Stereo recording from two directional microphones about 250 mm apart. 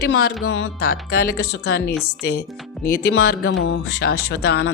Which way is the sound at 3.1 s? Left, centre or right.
Left.